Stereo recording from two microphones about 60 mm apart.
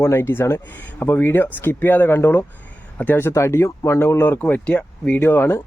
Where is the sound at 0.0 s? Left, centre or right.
Left.